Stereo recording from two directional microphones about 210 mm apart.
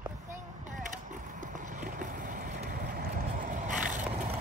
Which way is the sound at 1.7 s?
35° right (ahead or behind).